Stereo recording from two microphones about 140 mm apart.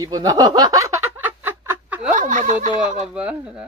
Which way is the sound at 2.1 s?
65° right (ahead or behind).